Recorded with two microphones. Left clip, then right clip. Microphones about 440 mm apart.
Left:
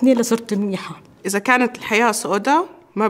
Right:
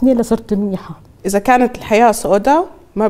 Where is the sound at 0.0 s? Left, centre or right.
Right.